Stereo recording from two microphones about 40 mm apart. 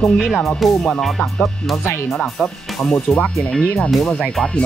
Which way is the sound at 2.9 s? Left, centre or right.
Left.